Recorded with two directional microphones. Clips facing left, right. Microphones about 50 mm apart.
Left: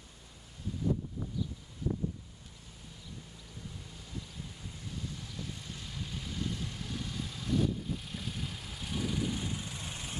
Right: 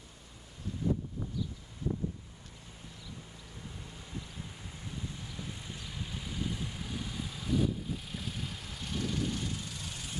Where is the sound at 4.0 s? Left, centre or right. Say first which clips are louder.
Right 1 dB; right.